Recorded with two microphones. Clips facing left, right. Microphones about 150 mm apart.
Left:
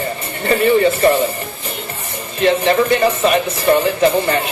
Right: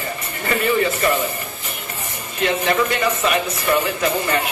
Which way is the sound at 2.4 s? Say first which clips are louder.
Left 5 dB; 30° left (ahead or behind).